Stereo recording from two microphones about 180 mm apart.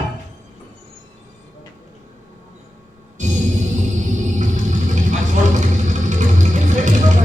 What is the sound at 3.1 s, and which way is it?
Music, 45° right (ahead or behind).